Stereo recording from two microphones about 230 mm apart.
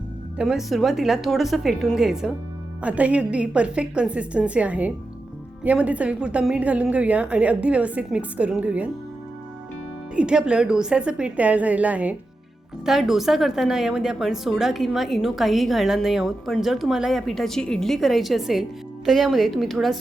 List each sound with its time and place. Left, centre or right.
0.3 s a woman's voice: centre
10.2 s a woman's voice: centre